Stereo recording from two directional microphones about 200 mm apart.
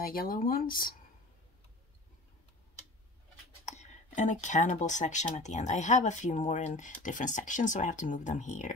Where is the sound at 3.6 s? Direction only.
35° left (ahead or behind).